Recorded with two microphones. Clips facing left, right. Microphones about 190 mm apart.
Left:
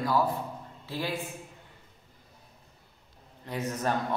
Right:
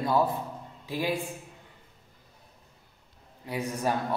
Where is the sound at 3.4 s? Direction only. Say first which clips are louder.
Right 1 dB; 10° right (ahead or behind).